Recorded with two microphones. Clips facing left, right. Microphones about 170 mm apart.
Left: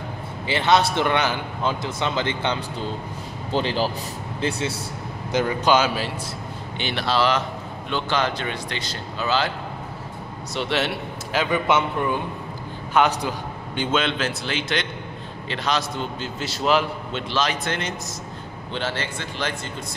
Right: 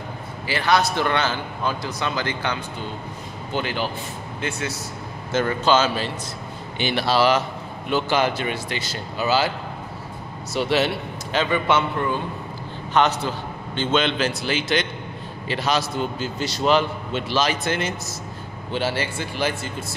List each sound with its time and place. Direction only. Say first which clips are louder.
0.5 s a man's voice: left 1 dB; 25° left (ahead or behind)
5.3 s speech: even; 15° left (ahead or behind)
6.8 s a man's voice: right 3 dB; 5° right (ahead or behind)
10.5 s a man's voice: right 3 dB; 5° right (ahead or behind)
12.9 s a man's voice: even; 10° left (ahead or behind); by 20.0 s 10° right (ahead or behind)